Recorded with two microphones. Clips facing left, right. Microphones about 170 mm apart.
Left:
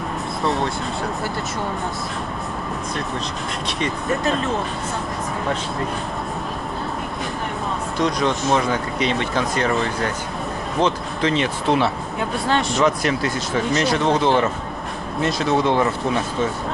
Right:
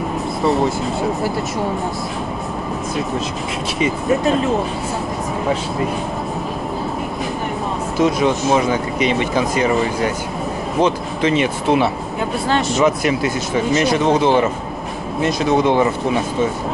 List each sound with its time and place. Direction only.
0.4 s speech: centre (ahead or behind)
3.8 s speech: centre (ahead or behind)
8.0 s speech: 5° right (ahead or behind)